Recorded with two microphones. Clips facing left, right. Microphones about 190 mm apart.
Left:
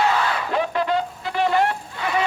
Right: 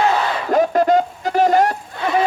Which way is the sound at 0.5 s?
45° right (ahead or behind).